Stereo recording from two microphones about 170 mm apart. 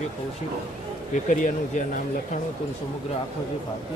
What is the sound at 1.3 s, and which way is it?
Speech, 45° left (ahead or behind).